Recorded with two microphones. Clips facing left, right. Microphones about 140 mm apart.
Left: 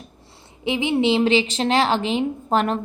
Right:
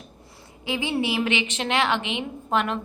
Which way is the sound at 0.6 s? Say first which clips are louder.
Left 6 dB; 20° left (ahead or behind).